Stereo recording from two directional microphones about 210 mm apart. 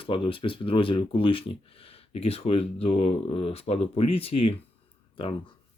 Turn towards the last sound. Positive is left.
turn(degrees=25)  # may be behind; listen again after turning